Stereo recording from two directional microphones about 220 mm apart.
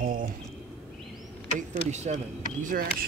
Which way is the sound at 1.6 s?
30° right (ahead or behind).